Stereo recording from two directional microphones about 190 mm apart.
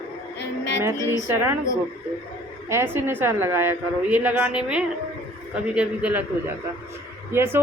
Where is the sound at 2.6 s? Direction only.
15° right (ahead or behind).